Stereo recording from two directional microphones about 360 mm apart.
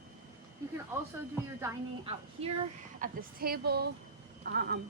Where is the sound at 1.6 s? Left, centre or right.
Centre.